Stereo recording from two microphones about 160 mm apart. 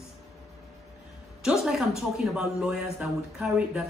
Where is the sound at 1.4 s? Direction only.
5° right (ahead or behind).